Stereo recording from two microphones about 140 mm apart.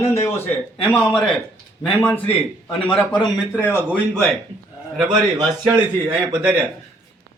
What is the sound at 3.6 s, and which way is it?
Speech, 15° right (ahead or behind).